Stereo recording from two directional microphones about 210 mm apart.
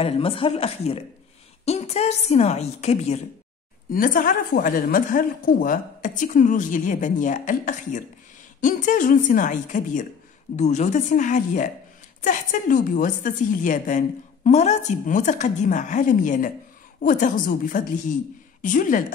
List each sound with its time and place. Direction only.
0.0 s a woman's voice: 25° left (ahead or behind)
3.9 s a woman's voice: 40° left (ahead or behind)